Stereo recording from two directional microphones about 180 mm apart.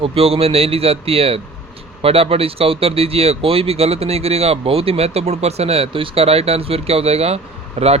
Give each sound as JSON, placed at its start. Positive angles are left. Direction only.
{"t": 0.0, "sound": "speech", "side_deg": -35}